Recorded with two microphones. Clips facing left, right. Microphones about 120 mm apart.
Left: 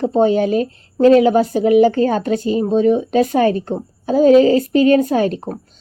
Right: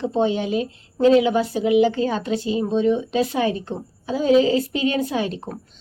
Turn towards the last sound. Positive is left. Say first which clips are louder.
# left 7 dB
turn(degrees=45)  # may be behind; listen again after turning